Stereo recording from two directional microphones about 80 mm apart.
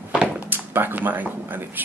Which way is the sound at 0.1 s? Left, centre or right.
Centre.